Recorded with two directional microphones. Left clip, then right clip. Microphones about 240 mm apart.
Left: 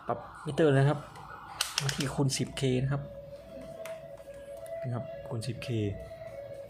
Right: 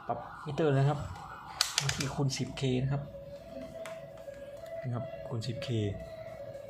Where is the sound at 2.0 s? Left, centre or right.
Left.